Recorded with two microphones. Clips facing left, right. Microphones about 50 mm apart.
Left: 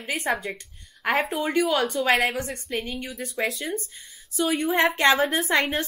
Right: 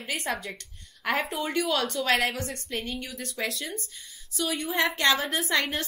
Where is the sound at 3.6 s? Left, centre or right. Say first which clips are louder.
Left 6 dB; left.